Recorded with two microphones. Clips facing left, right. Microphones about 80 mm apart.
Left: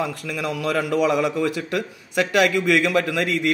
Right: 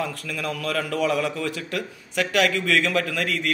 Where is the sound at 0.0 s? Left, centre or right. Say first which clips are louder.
Left 3 dB; centre.